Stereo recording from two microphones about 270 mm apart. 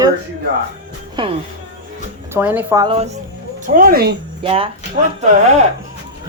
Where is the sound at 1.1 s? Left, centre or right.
Centre.